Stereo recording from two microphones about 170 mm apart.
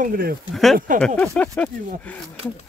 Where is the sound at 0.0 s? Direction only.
60° right (ahead or behind).